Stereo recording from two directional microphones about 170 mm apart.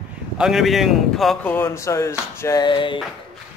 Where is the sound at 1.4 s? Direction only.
10° left (ahead or behind); by 3.0 s 30° left (ahead or behind).